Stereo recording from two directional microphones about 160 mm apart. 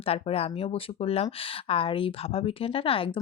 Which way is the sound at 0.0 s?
40° left (ahead or behind).